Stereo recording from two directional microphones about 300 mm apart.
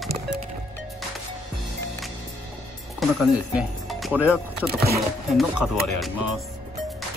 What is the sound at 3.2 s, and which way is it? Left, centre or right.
Speech, centre.